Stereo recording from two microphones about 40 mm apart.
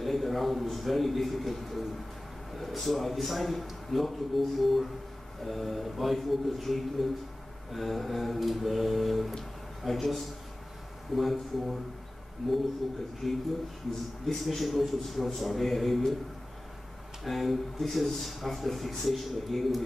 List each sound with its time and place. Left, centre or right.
0.0 s a man's voice: centre
17.2 s a man's voice: centre